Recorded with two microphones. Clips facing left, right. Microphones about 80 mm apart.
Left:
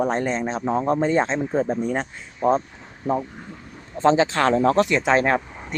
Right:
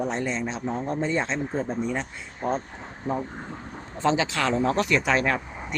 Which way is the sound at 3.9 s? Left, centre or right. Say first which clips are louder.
Left 6 dB; left.